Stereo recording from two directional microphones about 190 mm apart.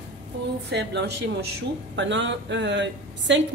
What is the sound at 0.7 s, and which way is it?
A woman's voice, 65° right (ahead or behind).